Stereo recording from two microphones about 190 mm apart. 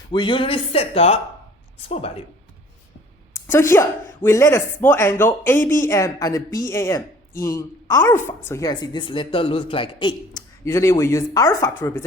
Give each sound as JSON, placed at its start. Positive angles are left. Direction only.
{"t": 0.1, "sound": "a woman's voice", "side_deg": 25}
{"t": 3.3, "sound": "a woman's voice", "side_deg": 15}
{"t": 10.6, "sound": "speech", "side_deg": 15}